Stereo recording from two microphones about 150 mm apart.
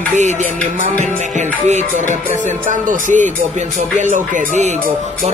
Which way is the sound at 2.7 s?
60° right (ahead or behind).